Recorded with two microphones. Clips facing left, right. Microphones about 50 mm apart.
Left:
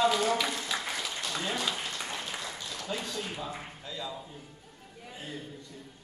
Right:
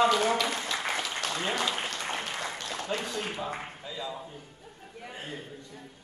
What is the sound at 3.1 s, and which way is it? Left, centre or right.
Speech, right.